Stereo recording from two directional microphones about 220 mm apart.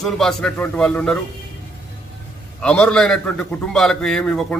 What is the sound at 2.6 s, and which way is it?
A man's voice, 5° left (ahead or behind).